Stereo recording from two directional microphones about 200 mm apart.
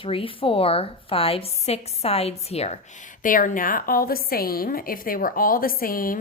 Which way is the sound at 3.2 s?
40° left (ahead or behind).